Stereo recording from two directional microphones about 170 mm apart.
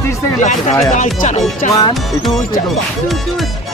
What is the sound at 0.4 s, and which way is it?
Speech, 45° left (ahead or behind).